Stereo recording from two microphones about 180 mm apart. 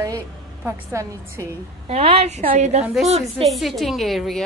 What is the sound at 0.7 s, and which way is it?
Speech, 15° right (ahead or behind).